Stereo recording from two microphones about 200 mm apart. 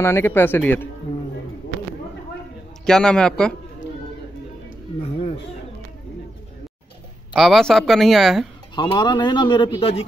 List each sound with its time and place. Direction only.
0.0 s speech: 10° left (ahead or behind)
2.8 s speech: 5° left (ahead or behind)
5.0 s a sound: 30° left (ahead or behind)
7.3 s speech: centre (ahead or behind)
8.7 s a man's voice: 20° left (ahead or behind)